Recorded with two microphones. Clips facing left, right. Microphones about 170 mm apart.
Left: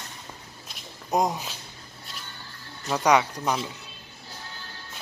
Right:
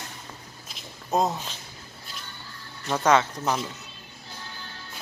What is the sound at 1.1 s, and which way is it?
Speech, 15° left (ahead or behind).